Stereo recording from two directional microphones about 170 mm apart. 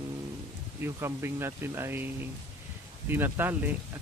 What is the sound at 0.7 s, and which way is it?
Speech, 15° right (ahead or behind).